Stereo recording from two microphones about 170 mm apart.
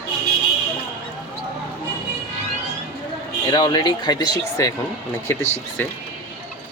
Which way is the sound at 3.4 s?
25° left (ahead or behind).